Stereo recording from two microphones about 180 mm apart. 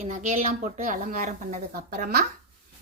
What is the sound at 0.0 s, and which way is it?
Speech, 40° right (ahead or behind).